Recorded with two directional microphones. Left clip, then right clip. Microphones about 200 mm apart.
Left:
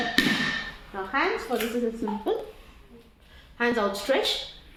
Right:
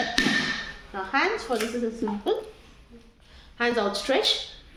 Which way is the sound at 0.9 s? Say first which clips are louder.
Right 1 dB; 20° right (ahead or behind).